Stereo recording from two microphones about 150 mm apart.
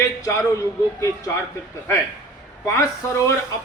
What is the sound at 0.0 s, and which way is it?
Speech, 20° left (ahead or behind).